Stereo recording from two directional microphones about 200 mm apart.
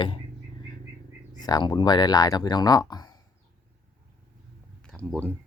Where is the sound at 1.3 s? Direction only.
20° left (ahead or behind).